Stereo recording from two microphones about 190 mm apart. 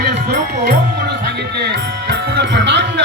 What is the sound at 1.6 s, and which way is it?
Speech, 60° right (ahead or behind).